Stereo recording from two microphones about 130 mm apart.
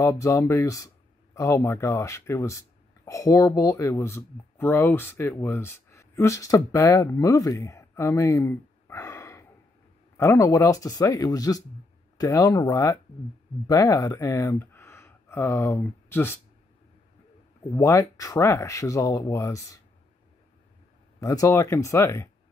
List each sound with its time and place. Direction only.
0.0 s speech: 25° left (ahead or behind)
17.7 s speech: 25° left (ahead or behind)
21.2 s speech: 25° left (ahead or behind)